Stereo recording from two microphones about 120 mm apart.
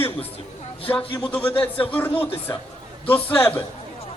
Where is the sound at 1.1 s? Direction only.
15° left (ahead or behind).